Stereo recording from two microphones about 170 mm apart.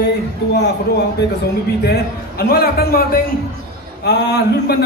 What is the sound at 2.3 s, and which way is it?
A man's voice, 65° left (ahead or behind).